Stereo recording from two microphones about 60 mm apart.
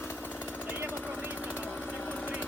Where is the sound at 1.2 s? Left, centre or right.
Left.